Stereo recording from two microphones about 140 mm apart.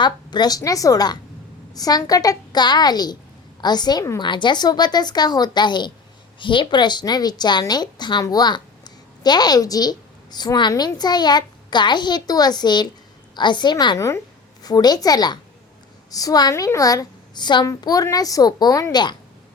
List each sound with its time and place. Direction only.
0.0 s a woman's voice: 30° left (ahead or behind)